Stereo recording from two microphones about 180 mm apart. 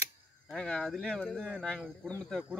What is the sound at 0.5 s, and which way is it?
Speech, 5° left (ahead or behind).